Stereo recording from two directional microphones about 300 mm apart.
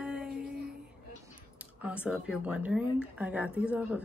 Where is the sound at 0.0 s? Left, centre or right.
Centre.